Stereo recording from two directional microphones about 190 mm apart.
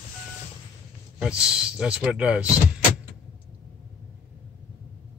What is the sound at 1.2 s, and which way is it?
Speech, 5° right (ahead or behind).